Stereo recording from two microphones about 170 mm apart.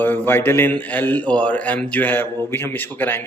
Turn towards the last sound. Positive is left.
turn(degrees=10)  # may be behind; listen again after turning